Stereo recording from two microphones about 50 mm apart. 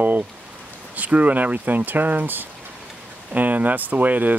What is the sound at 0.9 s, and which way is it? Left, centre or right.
Speech, right.